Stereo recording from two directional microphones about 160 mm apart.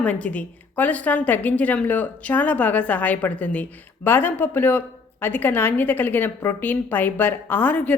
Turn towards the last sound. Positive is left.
turn(degrees=10)  # may be behind; listen again after turning